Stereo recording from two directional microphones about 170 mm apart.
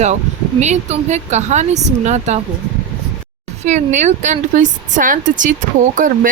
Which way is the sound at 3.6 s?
45° right (ahead or behind).